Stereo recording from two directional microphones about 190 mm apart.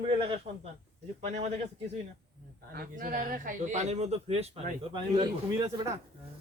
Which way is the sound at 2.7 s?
50° right (ahead or behind).